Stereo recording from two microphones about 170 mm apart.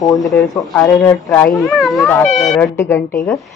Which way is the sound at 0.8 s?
15° left (ahead or behind).